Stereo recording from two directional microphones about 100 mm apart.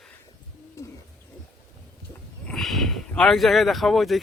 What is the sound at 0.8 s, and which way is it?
Owl, 30° left (ahead or behind).